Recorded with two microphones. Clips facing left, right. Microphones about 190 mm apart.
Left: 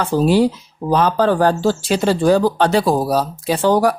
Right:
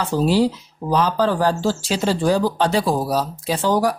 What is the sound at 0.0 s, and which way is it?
Speech, 55° left (ahead or behind).